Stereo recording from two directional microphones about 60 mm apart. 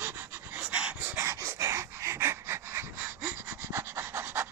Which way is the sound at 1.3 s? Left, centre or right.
Right.